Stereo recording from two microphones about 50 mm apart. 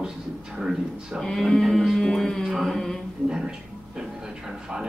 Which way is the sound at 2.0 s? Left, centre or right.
Centre.